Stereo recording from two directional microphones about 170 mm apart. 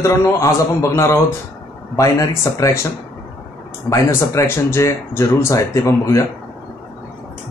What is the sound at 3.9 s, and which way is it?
Speech, 15° left (ahead or behind).